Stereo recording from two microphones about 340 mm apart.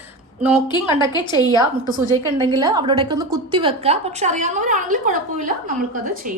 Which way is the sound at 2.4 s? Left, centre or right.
Centre.